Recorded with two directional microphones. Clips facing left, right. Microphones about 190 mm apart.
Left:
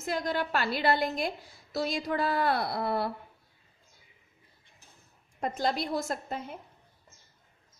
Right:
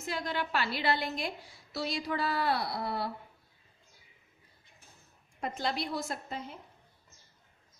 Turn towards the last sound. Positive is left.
turn(degrees=50)  # may be behind; listen again after turning